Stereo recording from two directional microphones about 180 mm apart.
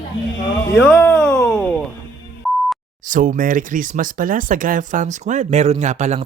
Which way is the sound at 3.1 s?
50° right (ahead or behind).